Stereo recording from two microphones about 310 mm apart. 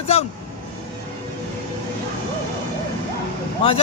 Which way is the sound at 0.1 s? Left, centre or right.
Centre.